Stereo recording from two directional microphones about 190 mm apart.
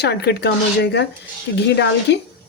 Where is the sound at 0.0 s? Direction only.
60° left (ahead or behind).